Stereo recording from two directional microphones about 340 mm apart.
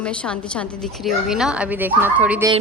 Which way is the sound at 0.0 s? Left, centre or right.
Centre.